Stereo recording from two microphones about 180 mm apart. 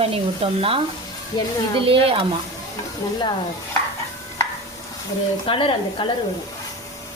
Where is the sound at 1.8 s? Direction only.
30° right (ahead or behind).